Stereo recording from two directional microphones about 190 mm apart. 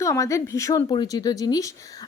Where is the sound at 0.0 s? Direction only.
15° left (ahead or behind).